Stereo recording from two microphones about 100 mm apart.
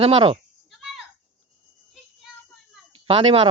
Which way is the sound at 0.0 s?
70° right (ahead or behind).